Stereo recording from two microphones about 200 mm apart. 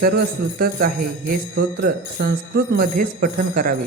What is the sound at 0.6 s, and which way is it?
Speech, 45° right (ahead or behind).